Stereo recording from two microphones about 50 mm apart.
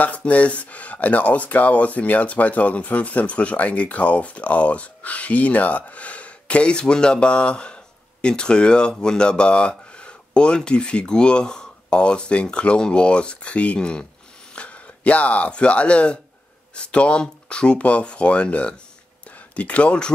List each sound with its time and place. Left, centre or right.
0.0 s speech: left